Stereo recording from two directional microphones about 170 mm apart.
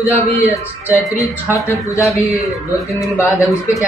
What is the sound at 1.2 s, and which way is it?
Speech, 15° left (ahead or behind).